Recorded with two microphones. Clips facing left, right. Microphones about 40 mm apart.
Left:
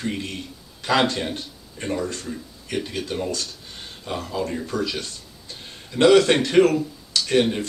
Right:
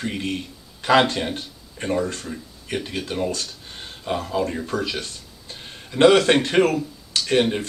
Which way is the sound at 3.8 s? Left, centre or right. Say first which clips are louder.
Right 4 dB; right.